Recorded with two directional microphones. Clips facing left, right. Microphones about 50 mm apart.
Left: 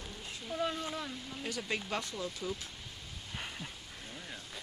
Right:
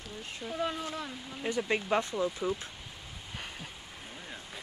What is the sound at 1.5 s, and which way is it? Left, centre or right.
Speech, right.